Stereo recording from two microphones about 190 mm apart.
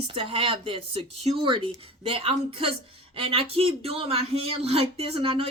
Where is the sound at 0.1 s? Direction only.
30° right (ahead or behind).